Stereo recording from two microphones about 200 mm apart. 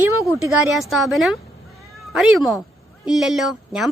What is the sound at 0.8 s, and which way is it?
A woman's voice, centre (ahead or behind).